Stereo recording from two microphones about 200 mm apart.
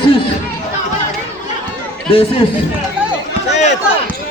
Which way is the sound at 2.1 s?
25° left (ahead or behind).